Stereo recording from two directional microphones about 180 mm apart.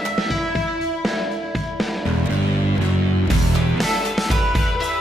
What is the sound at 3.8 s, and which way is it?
Music, centre (ahead or behind).